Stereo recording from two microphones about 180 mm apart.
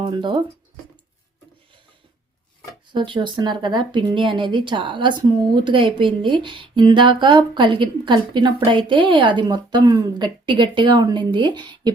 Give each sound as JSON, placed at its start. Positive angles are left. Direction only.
{"t": 0.0, "sound": "speech", "side_deg": -25}
{"t": 2.9, "sound": "speech", "side_deg": -25}